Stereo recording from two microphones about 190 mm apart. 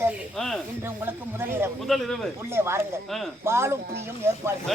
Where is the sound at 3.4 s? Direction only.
15° right (ahead or behind).